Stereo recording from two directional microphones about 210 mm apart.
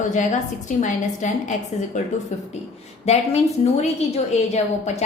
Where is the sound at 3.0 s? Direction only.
30° left (ahead or behind).